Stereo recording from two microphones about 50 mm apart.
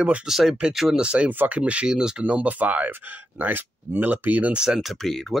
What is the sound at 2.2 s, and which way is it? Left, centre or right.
Speech, right.